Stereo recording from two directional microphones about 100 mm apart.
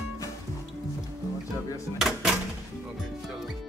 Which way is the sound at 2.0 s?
5° right (ahead or behind).